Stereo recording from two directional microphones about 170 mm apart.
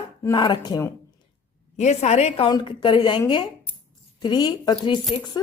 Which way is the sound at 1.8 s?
40° left (ahead or behind).